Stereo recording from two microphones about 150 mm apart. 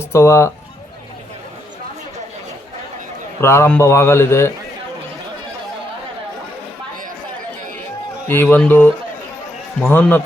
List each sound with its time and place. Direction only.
0.0 s speech: 20° left (ahead or behind)
3.4 s a man's voice: 20° left (ahead or behind)
8.3 s a man's voice: 15° left (ahead or behind)